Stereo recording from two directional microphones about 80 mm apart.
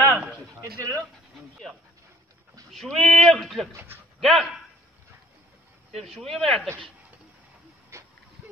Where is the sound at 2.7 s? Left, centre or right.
Centre.